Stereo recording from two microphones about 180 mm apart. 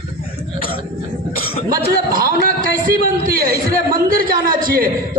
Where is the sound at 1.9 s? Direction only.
55° right (ahead or behind).